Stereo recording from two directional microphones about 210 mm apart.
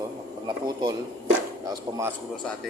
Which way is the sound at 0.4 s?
25° right (ahead or behind).